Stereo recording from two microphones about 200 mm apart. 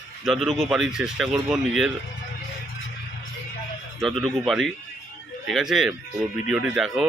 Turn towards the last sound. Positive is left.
turn(degrees=-5)  # may be behind; listen again after turning